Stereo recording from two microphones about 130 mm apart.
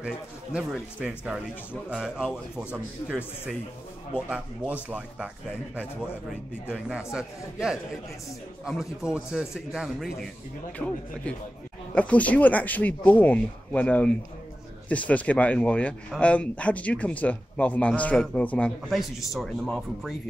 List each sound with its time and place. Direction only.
0.0 s a man's voice: 5° right (ahead or behind)
4.8 s a man's voice: 10° right (ahead or behind)
6.7 s speech: 5° right (ahead or behind)
10.8 s speech: 15° left (ahead or behind)
18.9 s speech: centre (ahead or behind)